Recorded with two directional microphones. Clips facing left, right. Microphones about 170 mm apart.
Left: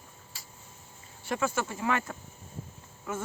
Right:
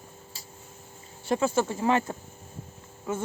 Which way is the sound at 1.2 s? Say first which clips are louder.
Right 6 dB; 30° right (ahead or behind).